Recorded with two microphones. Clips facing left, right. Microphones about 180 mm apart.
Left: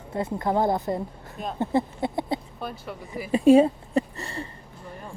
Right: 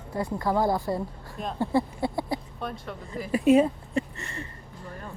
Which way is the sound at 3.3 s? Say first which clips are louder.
Left 4 dB; 30° left (ahead or behind).